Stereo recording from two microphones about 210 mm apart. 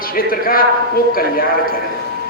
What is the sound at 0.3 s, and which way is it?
Speech, 45° left (ahead or behind).